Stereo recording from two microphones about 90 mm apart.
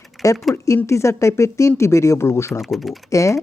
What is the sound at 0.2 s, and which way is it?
Speech, centre (ahead or behind).